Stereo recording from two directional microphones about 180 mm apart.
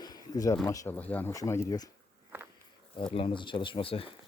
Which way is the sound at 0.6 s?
15° left (ahead or behind).